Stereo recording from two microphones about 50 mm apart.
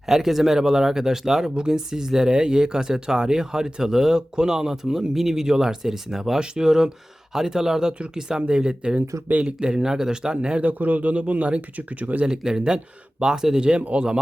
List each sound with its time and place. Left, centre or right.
0.1 s a man's voice: centre; by 12.2 s right
12.2 s a man's voice: centre